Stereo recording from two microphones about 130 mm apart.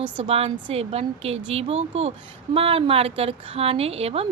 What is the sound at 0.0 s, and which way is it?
A woman's voice, 50° right (ahead or behind).